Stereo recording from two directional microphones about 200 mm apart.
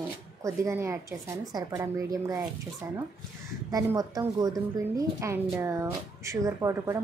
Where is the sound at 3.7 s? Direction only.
15° right (ahead or behind).